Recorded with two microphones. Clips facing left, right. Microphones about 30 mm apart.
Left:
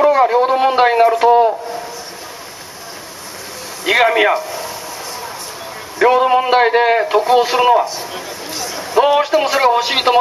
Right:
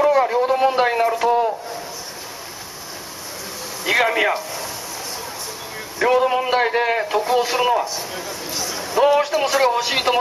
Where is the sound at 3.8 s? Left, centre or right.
Left.